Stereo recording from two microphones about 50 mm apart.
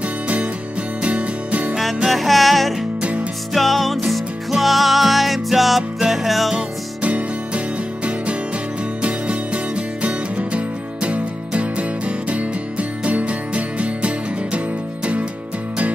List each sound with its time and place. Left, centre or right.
1.0 s music: right
2.0 s music: centre
7.0 s music: right